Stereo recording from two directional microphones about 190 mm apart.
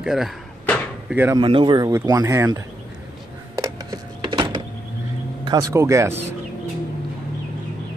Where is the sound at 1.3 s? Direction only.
25° right (ahead or behind).